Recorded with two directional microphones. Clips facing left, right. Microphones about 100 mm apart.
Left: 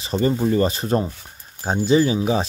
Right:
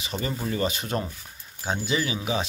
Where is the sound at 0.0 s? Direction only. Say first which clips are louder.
Left 10 dB; 35° left (ahead or behind).